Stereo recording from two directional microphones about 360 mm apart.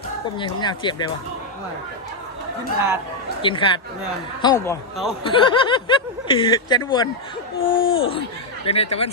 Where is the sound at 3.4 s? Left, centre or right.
Centre.